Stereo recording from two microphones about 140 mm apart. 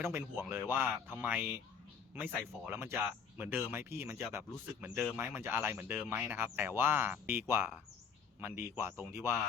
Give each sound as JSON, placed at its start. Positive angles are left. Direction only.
{"t": 0.0, "sound": "speech", "side_deg": -15}